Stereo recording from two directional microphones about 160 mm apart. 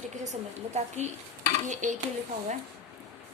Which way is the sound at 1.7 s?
50° right (ahead or behind).